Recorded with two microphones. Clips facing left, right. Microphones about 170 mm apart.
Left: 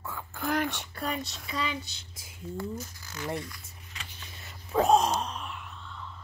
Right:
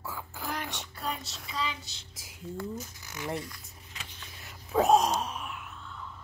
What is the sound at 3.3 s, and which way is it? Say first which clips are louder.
Speech: left 1 dB; centre (ahead or behind).